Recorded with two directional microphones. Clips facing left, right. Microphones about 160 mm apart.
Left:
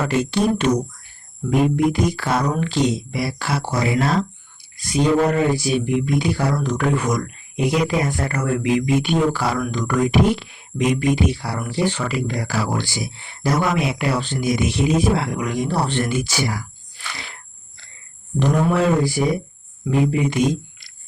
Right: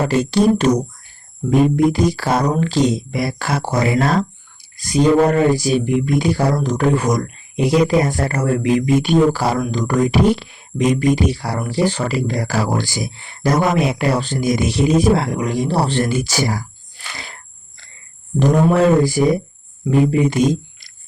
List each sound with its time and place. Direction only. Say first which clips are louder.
0.0 s speech: right 4 dB; 35° right (ahead or behind)
18.3 s a man's voice: right 4 dB; 40° right (ahead or behind)